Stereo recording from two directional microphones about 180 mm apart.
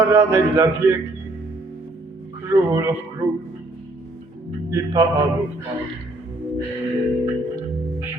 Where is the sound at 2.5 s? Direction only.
15° right (ahead or behind).